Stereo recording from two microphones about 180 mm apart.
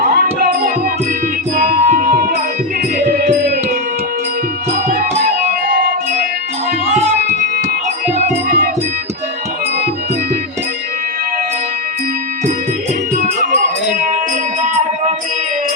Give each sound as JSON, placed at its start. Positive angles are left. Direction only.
{"t": 0.0, "sound": "music", "side_deg": -60}
{"t": 1.5, "sound": "music", "side_deg": -50}
{"t": 5.7, "sound": "music", "side_deg": -55}
{"t": 8.4, "sound": "music", "side_deg": -55}
{"t": 13.2, "sound": "music", "side_deg": -45}